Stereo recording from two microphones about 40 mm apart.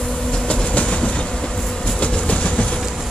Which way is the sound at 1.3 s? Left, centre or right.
Centre.